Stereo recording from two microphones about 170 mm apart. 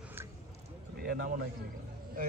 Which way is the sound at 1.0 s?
60° right (ahead or behind).